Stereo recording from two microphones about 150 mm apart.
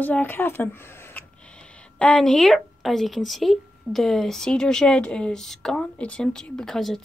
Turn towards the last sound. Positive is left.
turn(degrees=0)  # may be behind; listen again after turning